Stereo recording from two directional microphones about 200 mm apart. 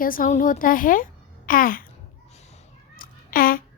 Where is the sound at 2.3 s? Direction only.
35° left (ahead or behind).